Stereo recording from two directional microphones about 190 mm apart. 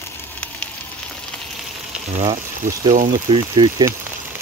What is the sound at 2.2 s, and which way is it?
Speech, 35° right (ahead or behind).